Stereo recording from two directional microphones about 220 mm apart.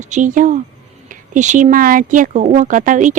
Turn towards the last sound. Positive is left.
turn(degrees=-35)  # may be behind; listen again after turning